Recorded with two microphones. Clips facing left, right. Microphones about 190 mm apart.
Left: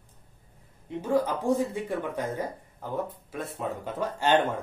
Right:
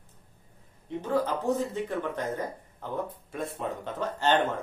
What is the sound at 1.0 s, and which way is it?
A man's voice, 10° left (ahead or behind).